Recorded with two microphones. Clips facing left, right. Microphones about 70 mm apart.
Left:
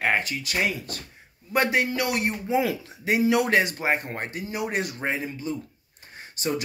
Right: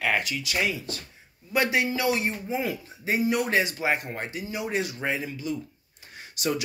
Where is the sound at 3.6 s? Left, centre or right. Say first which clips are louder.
Left 2 dB; left.